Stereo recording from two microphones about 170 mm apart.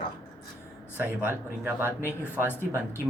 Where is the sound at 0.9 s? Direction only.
10° right (ahead or behind).